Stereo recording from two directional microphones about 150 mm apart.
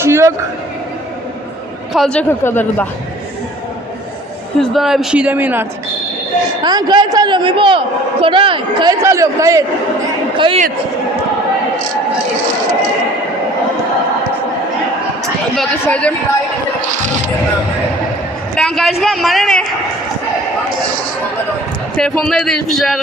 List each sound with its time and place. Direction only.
0.0 s a sound: 20° right (ahead or behind)
1.9 s speech: 5° left (ahead or behind)
4.6 s a man's voice: centre (ahead or behind)
6.6 s a man's voice: 30° right (ahead or behind)
9.0 s a man's voice: 20° right (ahead or behind)
10.3 s speech: 35° right (ahead or behind)
15.5 s speech: 10° left (ahead or behind)
16.9 s speech: 55° right (ahead or behind)
18.5 s a man's voice: 5° left (ahead or behind)
21.9 s a man's voice: 5° left (ahead or behind)